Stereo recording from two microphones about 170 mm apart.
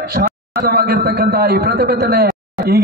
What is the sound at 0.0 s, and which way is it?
A man's voice, 60° right (ahead or behind).